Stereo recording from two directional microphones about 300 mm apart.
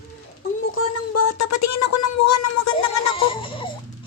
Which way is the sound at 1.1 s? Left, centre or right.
Left.